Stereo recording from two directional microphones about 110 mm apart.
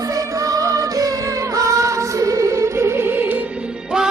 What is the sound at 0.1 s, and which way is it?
Music, 30° right (ahead or behind).